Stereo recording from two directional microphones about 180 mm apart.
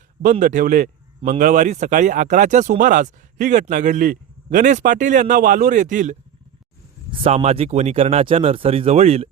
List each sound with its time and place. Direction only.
0.2 s a man's voice: 45° right (ahead or behind)